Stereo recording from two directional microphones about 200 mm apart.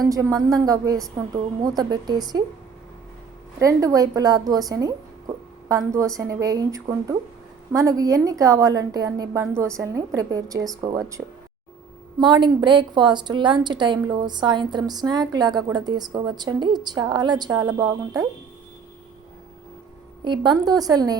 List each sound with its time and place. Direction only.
0.0 s a woman's voice: 15° right (ahead or behind)
3.6 s a woman's voice: 15° right (ahead or behind)
12.2 s a woman's voice: 25° right (ahead or behind)
20.2 s a woman's voice: 25° right (ahead or behind)